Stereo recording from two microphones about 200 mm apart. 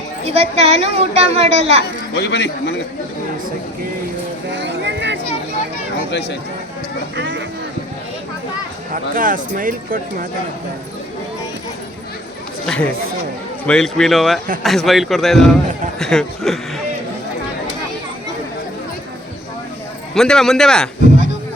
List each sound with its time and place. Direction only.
0.3 s a woman's voice: 30° right (ahead or behind)
2.1 s a man's voice: 60° left (ahead or behind)
4.5 s a sound: 60° right (ahead or behind)
6.1 s speech: 55° left (ahead or behind)
7.2 s speech: 65° right (ahead or behind)
9.1 s speech: 45° right (ahead or behind)
12.6 s a man's voice: 5° left (ahead or behind)
20.1 s a man's voice: 5° left (ahead or behind)